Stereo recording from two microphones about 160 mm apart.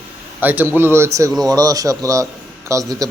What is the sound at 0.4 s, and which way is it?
A man's voice, 10° right (ahead or behind).